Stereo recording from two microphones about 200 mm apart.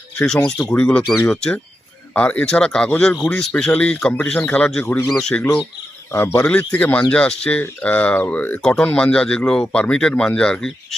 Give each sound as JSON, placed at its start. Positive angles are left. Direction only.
{"t": 0.2, "sound": "a man's voice", "side_deg": 5}